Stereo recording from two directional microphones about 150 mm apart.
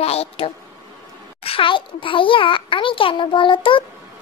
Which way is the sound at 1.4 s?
35° left (ahead or behind).